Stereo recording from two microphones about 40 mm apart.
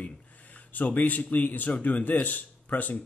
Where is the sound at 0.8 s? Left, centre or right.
Left.